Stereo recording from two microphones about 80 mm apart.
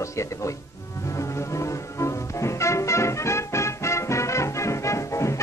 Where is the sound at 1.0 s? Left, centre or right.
Left.